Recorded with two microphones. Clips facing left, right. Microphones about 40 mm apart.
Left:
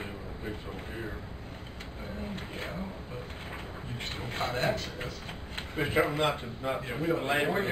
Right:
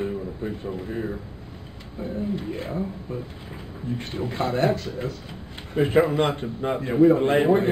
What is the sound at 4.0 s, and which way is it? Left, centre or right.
Speech, left.